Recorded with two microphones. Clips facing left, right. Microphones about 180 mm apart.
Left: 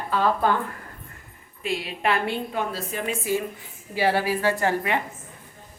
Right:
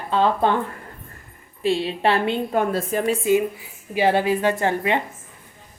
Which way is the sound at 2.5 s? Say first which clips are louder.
Right 7 dB; 50° right (ahead or behind).